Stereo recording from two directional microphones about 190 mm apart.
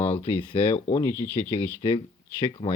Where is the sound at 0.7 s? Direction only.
15° left (ahead or behind).